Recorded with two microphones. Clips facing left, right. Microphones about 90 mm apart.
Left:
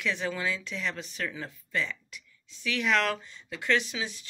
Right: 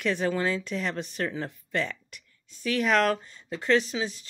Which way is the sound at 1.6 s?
55° right (ahead or behind).